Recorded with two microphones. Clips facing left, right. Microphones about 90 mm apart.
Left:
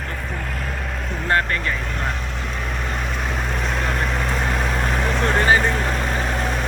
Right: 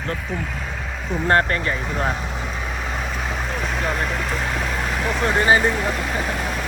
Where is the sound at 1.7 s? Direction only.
5° right (ahead or behind).